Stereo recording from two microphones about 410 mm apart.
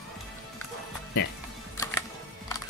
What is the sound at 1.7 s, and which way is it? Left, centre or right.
Music, centre.